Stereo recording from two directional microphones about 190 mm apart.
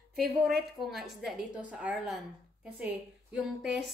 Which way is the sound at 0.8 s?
Centre (ahead or behind).